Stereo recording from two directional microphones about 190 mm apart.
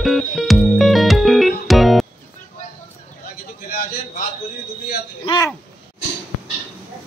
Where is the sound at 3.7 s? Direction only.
50° left (ahead or behind).